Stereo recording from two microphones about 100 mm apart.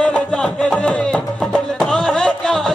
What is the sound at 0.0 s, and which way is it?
Music, 10° left (ahead or behind).